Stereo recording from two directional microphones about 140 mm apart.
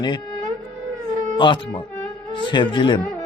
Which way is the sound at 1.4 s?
35° left (ahead or behind).